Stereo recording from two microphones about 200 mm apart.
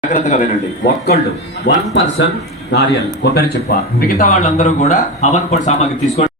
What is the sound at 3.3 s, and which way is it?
Speech, 45° left (ahead or behind).